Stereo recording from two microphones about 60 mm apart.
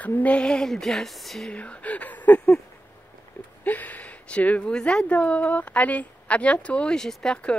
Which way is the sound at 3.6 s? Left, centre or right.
Left.